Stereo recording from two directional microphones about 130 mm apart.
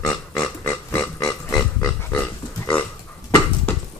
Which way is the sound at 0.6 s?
15° left (ahead or behind).